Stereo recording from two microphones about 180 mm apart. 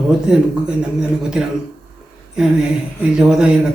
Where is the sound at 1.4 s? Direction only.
5° right (ahead or behind).